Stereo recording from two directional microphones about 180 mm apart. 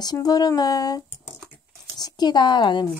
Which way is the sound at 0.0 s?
20° left (ahead or behind).